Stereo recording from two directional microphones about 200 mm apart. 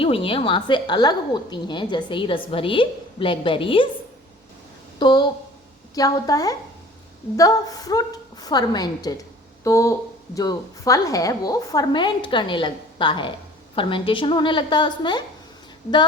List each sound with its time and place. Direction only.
0.0 s a woman's voice: 25° left (ahead or behind)
4.9 s a woman's voice: 20° left (ahead or behind)